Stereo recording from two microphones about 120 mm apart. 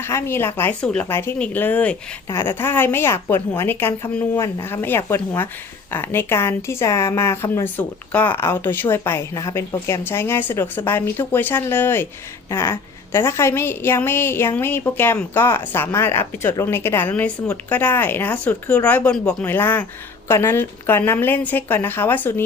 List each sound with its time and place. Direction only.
0.0 s a woman's voice: 20° left (ahead or behind)